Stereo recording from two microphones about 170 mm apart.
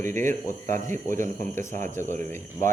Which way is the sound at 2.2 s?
10° left (ahead or behind).